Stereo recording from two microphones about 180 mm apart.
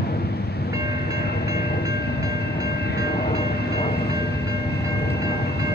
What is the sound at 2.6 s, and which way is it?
Train, 60° left (ahead or behind).